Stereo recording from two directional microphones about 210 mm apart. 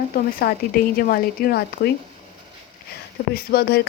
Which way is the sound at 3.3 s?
45° left (ahead or behind).